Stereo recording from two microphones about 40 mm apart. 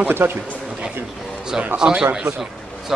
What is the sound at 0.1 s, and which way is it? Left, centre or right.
Speech, right.